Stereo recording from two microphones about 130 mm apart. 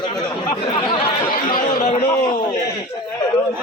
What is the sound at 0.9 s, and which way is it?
Chatter, 45° left (ahead or behind).